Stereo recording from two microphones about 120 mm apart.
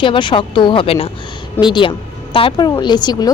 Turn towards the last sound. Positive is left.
turn(degrees=35)  # may be behind; listen again after turning